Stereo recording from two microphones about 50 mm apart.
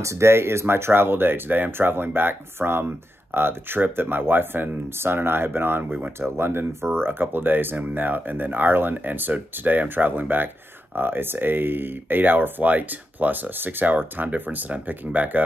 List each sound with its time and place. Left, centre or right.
0.0 s speech: right
6.3 s speech: right